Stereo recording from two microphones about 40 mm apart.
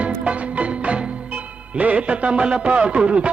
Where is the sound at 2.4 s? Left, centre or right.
Right.